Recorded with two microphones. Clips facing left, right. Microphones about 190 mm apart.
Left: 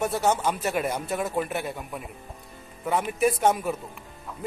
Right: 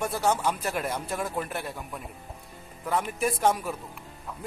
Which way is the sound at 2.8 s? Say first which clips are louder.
Left 4 dB; 5° left (ahead or behind).